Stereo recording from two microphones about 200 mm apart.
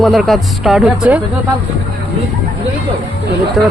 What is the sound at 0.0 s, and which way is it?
Speech, centre (ahead or behind).